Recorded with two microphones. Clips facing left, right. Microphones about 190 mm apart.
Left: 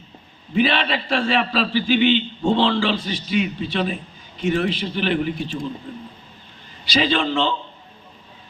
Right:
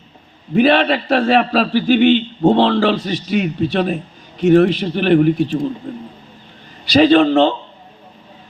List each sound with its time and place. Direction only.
0.5 s a man's voice: 50° right (ahead or behind)
4.4 s a man's voice: 60° right (ahead or behind)
6.9 s a man's voice: 55° right (ahead or behind)